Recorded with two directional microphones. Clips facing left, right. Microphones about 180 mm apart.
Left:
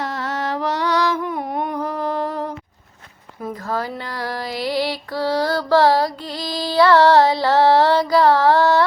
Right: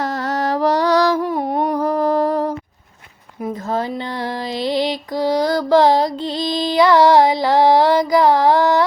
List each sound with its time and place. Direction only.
0.0 s music: 40° right (ahead or behind)
3.4 s music: 20° right (ahead or behind)